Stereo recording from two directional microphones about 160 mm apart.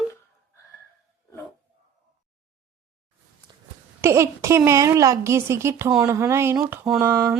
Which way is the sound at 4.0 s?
15° right (ahead or behind).